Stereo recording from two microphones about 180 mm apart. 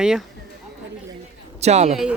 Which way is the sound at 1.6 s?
40° right (ahead or behind).